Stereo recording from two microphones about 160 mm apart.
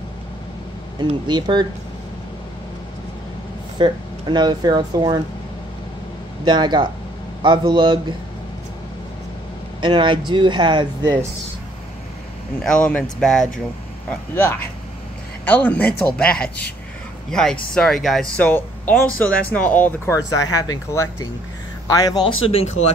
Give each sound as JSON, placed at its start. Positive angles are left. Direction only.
{"t": 0.9, "sound": "speech", "side_deg": -30}
{"t": 3.7, "sound": "speech", "side_deg": -30}
{"t": 6.4, "sound": "speech", "side_deg": -30}
{"t": 9.8, "sound": "speech", "side_deg": -30}
{"t": 12.6, "sound": "speech", "side_deg": 5}
{"t": 15.4, "sound": "speech", "side_deg": 10}
{"t": 20.2, "sound": "speech", "side_deg": 20}